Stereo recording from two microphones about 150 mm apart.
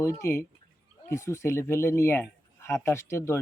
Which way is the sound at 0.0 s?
20° left (ahead or behind).